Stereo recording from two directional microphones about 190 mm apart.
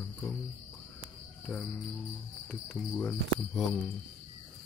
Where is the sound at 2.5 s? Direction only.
Centre (ahead or behind).